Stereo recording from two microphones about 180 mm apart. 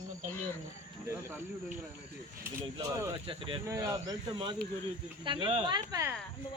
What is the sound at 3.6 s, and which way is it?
Speech, 15° right (ahead or behind).